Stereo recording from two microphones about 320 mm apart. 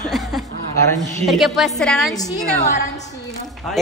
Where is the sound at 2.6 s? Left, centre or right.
Left.